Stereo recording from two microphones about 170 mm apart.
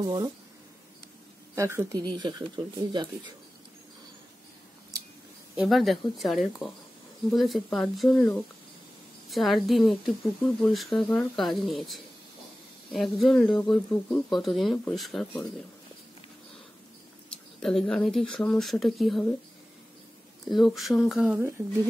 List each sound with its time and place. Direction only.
0.0 s speech: 25° right (ahead or behind)
1.5 s speech: 15° right (ahead or behind)
5.6 s speech: centre (ahead or behind)
9.3 s speech: centre (ahead or behind)
17.3 s speech: 5° left (ahead or behind)
20.4 s speech: centre (ahead or behind)